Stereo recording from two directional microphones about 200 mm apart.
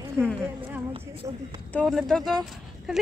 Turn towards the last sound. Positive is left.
turn(degrees=0)  # may be behind; listen again after turning